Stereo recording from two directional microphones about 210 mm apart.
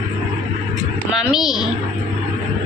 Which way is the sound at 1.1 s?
Centre (ahead or behind).